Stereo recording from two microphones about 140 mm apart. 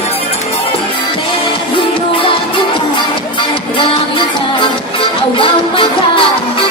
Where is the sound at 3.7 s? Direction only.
35° left (ahead or behind).